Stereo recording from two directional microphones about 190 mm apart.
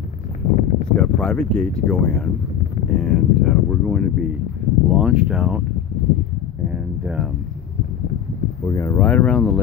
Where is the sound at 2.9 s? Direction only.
5° left (ahead or behind).